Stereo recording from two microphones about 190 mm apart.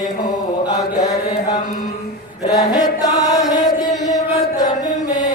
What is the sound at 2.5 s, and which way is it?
Chant, 20° left (ahead or behind).